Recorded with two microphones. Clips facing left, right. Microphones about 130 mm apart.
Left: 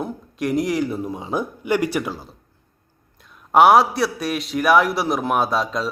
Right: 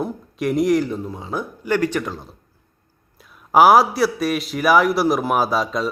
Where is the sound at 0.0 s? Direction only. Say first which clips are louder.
Right 2 dB; centre (ahead or behind).